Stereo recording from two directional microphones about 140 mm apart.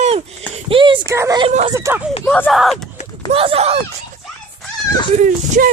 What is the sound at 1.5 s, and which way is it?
Speech, 55° right (ahead or behind).